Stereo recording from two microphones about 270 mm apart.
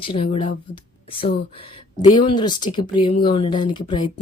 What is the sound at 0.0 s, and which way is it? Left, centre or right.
Speech, centre.